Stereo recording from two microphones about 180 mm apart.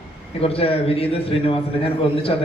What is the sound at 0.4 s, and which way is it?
A man's voice, 30° left (ahead or behind).